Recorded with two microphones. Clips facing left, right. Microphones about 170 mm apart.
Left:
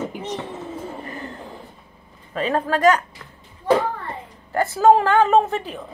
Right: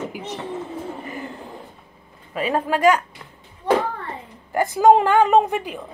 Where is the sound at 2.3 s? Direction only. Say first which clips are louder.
Even; 10° right (ahead or behind).